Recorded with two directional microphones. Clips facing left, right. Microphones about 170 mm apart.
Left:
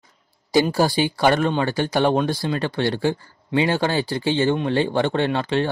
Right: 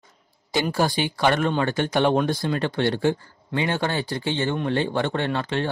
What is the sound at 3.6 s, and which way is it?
Speech, 30° left (ahead or behind).